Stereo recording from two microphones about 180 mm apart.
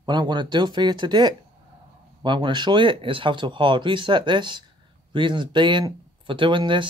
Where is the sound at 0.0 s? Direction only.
25° right (ahead or behind).